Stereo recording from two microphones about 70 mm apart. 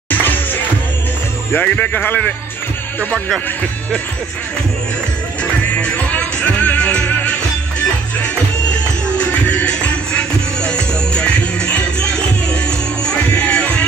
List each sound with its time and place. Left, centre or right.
0.1 s music: left
1.6 s a man's voice: left
5.4 s music: centre
9.2 s music: centre
13.5 s music: centre